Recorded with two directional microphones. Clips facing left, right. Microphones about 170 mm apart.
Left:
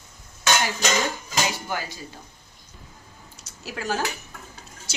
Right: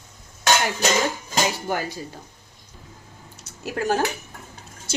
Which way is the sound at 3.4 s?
55° right (ahead or behind).